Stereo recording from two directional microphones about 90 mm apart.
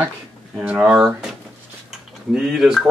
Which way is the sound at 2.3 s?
5° right (ahead or behind).